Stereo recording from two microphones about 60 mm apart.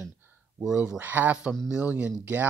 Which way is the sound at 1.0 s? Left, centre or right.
Right.